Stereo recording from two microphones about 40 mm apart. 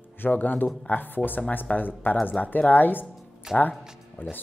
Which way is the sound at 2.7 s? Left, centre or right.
Left.